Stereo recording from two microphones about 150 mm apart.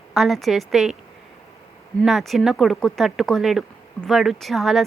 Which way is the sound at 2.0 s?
Centre (ahead or behind).